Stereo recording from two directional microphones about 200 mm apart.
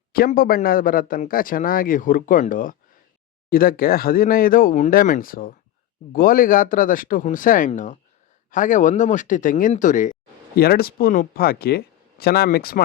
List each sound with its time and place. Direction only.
0.1 s a man's voice: 45° left (ahead or behind)